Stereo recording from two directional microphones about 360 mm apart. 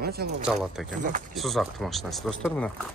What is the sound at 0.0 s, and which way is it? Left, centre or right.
Speech, right.